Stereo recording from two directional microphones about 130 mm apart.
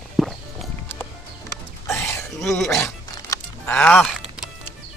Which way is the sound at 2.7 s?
25° left (ahead or behind).